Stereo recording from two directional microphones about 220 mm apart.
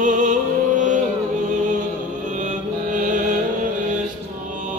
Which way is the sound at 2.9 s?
35° right (ahead or behind).